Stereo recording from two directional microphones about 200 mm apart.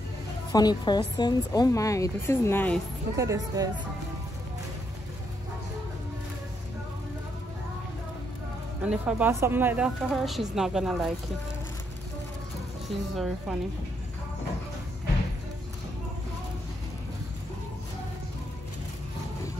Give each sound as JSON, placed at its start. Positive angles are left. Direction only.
{"t": 0.5, "sound": "speech", "side_deg": 20}
{"t": 3.2, "sound": "speech", "side_deg": -15}
{"t": 8.8, "sound": "a woman's voice", "side_deg": -5}
{"t": 13.1, "sound": "a woman's voice", "side_deg": 0}